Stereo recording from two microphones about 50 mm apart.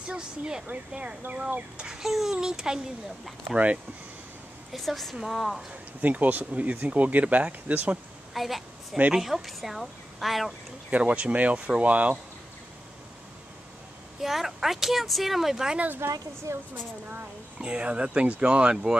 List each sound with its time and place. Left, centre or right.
0.7 s speech: right
1.8 s a child's voice: centre
3.5 s speech: right
4.7 s speech: centre
5.7 s speech: right
8.3 s a woman's voice: centre
10.9 s speech: right
14.2 s speech: centre
16.0 s speech: right
16.5 s speech: right
17.6 s speech: centre